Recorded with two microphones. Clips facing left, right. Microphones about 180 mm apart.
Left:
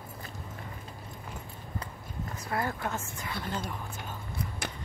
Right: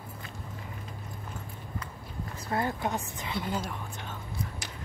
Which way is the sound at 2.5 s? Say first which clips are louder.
Right 3 dB; 25° right (ahead or behind).